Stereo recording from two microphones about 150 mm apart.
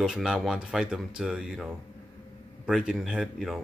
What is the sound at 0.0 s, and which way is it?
Speech, 5° right (ahead or behind).